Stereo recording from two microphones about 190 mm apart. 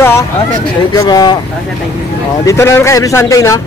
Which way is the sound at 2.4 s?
15° left (ahead or behind).